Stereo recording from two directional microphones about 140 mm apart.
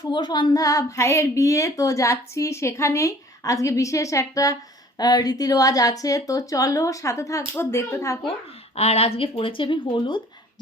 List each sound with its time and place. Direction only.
0.0 s speech: 30° left (ahead or behind)
8.3 s speech: 45° left (ahead or behind)